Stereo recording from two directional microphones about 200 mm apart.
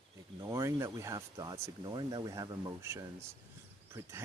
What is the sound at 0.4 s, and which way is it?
Speech, 15° right (ahead or behind).